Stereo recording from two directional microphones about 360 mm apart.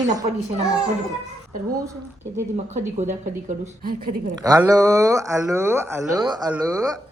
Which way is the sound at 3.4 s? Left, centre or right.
Right.